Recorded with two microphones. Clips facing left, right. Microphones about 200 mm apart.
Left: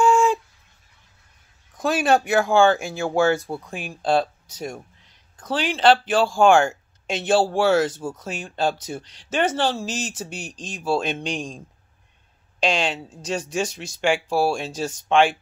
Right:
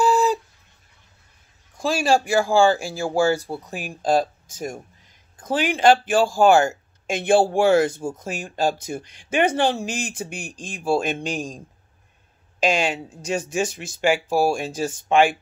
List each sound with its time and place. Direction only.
0.0 s a sound: 35° right (ahead or behind)
1.8 s speech: centre (ahead or behind)
4.2 s speech: 50° right (ahead or behind)
5.7 s speech: 10° right (ahead or behind)
9.0 s speech: 50° right (ahead or behind)
9.3 s speech: 15° right (ahead or behind)
12.5 s speech: 10° right (ahead or behind)
13.7 s speech: 50° right (ahead or behind)
14.0 s speech: 10° right (ahead or behind)